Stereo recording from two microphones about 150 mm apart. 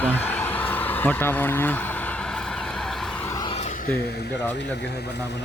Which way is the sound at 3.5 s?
50° left (ahead or behind).